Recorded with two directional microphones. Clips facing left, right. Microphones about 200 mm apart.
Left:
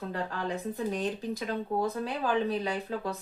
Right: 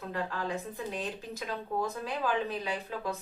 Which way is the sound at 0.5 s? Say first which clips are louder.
Left 4 dB; 35° left (ahead or behind).